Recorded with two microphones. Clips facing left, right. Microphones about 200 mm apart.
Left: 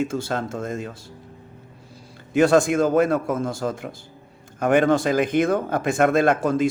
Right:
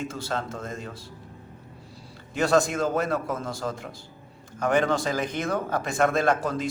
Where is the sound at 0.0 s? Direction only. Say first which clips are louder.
Left 6 dB; 50° left (ahead or behind).